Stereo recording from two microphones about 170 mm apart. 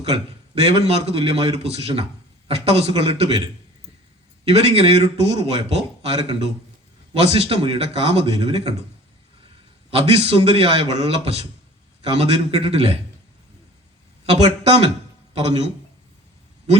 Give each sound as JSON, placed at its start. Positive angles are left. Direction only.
{"t": 0.0, "sound": "a man's voice", "side_deg": -35}
{"t": 9.9, "sound": "a man's voice", "side_deg": -35}
{"t": 15.3, "sound": "a man's voice", "side_deg": -35}